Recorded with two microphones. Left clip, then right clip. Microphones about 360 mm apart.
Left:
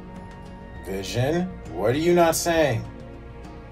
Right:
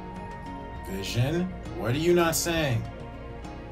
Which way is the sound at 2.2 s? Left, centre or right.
Centre.